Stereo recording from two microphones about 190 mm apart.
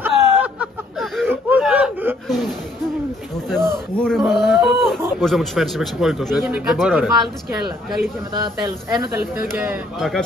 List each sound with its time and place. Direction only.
0.0 s a sound: 5° right (ahead or behind)
1.3 s whimper: 5° right (ahead or behind)
3.4 s a sound: centre (ahead or behind)
5.2 s a man's voice: centre (ahead or behind)
8.3 s speech: 20° right (ahead or behind)
9.6 s a man's voice: 5° right (ahead or behind)